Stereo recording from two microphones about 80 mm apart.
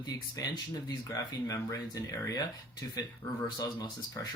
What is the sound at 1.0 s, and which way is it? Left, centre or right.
Speech, left.